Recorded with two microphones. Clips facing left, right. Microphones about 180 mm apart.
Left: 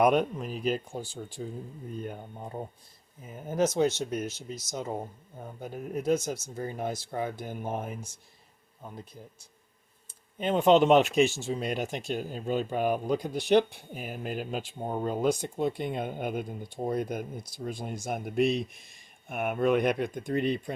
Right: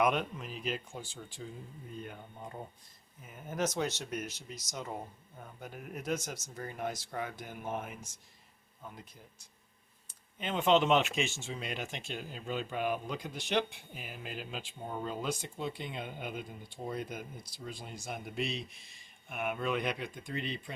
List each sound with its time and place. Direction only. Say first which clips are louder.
0.0 s speech: left 7 dB; 40° left (ahead or behind)
10.3 s speech: left 6 dB; 40° left (ahead or behind)